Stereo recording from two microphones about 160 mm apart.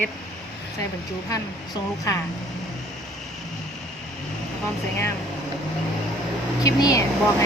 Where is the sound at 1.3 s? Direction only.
20° left (ahead or behind).